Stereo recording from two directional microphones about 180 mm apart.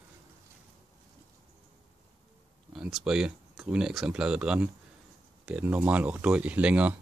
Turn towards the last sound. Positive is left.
turn(degrees=-5)  # may be behind; listen again after turning